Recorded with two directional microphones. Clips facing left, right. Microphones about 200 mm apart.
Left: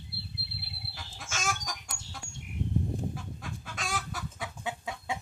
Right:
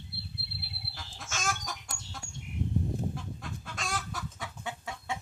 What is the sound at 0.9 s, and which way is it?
Chicken, centre (ahead or behind).